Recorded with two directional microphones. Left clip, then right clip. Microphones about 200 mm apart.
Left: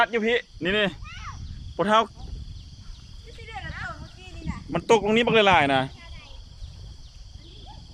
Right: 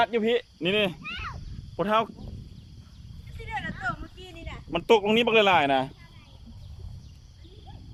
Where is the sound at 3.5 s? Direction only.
60° right (ahead or behind).